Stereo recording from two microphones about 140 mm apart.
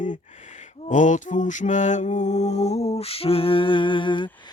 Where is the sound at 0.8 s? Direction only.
65° left (ahead or behind); by 4.3 s 35° left (ahead or behind).